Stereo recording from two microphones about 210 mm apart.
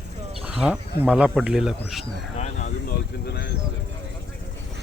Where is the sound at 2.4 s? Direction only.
35° left (ahead or behind).